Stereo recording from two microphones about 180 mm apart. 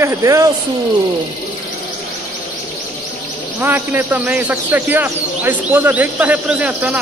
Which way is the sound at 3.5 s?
10° right (ahead or behind).